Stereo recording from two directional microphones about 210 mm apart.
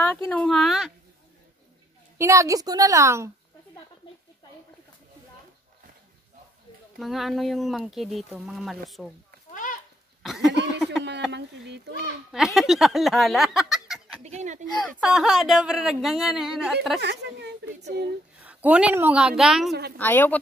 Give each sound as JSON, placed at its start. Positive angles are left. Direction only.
{"t": 0.0, "sound": "speech", "side_deg": 10}
{"t": 2.1, "sound": "a woman's voice", "side_deg": -15}
{"t": 7.0, "sound": "speech", "side_deg": 0}
{"t": 9.5, "sound": "a sound", "side_deg": 40}
{"t": 10.2, "sound": "a sound", "side_deg": 0}
{"t": 11.3, "sound": "speech", "side_deg": -55}
{"t": 12.3, "sound": "speech", "side_deg": 0}
{"t": 14.2, "sound": "speech", "side_deg": -35}
{"t": 14.9, "sound": "speech", "side_deg": 0}
{"t": 17.0, "sound": "speech", "side_deg": -55}
{"t": 18.4, "sound": "speech", "side_deg": -5}
{"t": 20.0, "sound": "a woman's voice", "side_deg": 10}